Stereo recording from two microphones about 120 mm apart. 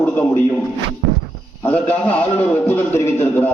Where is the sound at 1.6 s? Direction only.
10° left (ahead or behind).